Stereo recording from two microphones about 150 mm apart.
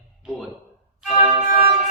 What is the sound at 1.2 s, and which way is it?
Music, 30° right (ahead or behind).